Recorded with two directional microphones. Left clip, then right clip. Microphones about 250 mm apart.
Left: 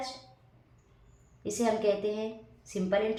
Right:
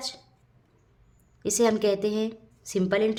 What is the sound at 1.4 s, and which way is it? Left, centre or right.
A woman's voice, right.